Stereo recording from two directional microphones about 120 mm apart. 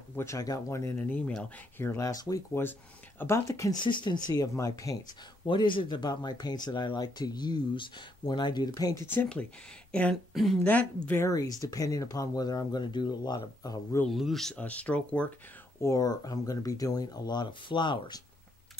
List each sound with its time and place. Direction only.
0.1 s speech: 25° left (ahead or behind)
0.9 s speech: 10° left (ahead or behind)
3.8 s speech: 40° left (ahead or behind)
5.5 s speech: 45° left (ahead or behind)
9.0 s speech: 15° left (ahead or behind)
10.3 s speech: centre (ahead or behind)
10.7 s speech: 15° left (ahead or behind)
11.2 s speech: 30° left (ahead or behind)
14.0 s speech: centre (ahead or behind)
15.8 s speech: 30° left (ahead or behind)